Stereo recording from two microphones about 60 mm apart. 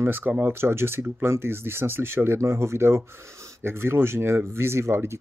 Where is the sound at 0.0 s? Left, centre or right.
Right.